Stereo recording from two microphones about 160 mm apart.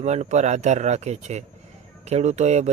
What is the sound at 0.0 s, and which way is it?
Speech, 45° right (ahead or behind).